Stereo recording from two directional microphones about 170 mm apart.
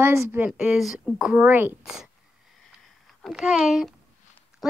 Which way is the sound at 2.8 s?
Centre (ahead or behind).